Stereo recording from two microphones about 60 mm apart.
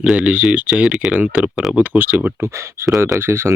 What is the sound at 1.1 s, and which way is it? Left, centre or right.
Speech, right.